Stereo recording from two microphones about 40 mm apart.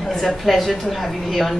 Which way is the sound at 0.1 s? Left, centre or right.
Centre.